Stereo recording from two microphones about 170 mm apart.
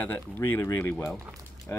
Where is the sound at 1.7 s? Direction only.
10° left (ahead or behind).